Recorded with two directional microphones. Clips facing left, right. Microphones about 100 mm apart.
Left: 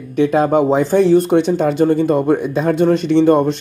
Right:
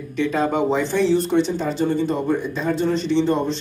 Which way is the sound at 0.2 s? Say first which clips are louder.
Left 7 dB; 50° left (ahead or behind).